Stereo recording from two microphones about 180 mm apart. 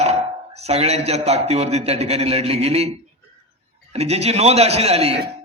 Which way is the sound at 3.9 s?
35° right (ahead or behind).